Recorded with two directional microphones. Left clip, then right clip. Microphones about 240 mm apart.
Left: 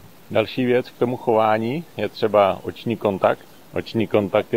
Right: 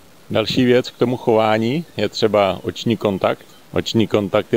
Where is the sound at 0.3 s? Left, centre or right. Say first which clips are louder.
Right 3 dB; right.